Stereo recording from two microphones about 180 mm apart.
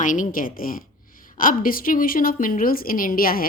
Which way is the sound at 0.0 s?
45° left (ahead or behind).